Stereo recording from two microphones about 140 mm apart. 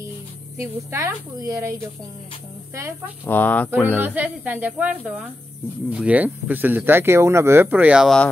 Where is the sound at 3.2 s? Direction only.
15° left (ahead or behind).